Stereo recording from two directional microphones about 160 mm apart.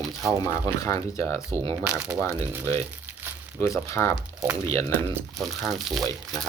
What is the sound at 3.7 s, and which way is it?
Speech, 20° left (ahead or behind).